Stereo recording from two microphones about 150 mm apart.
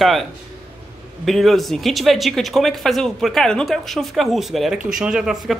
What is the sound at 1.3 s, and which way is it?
Speech, centre (ahead or behind).